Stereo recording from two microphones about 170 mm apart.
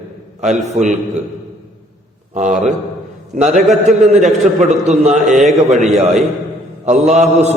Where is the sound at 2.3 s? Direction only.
45° right (ahead or behind).